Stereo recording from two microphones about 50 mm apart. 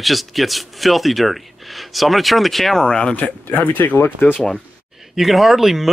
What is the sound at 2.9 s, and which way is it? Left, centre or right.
Speech, centre.